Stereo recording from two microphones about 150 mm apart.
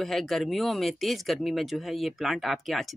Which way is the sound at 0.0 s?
Centre (ahead or behind).